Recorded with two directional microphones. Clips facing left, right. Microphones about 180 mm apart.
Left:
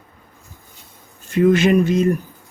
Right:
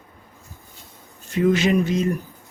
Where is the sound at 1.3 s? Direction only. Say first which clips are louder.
Left 4 dB; 55° left (ahead or behind).